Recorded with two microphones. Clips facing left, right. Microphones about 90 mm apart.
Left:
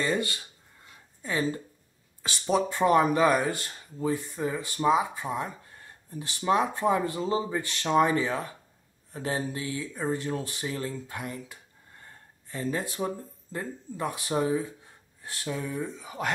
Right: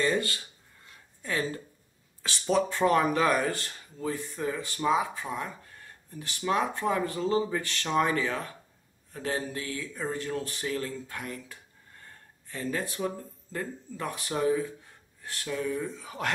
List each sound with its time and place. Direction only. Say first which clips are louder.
0.0 s speech: right 1 dB; 10° left (ahead or behind)
16.0 s speech: left 1 dB; 5° left (ahead or behind)